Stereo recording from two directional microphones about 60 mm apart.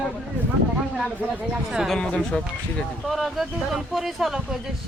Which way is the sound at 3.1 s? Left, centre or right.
Centre.